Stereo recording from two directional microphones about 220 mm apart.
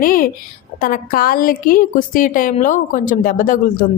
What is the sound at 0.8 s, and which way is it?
A woman's voice, 40° left (ahead or behind).